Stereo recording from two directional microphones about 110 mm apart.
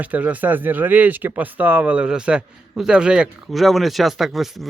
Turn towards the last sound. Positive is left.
turn(degrees=0)  # may be behind; listen again after turning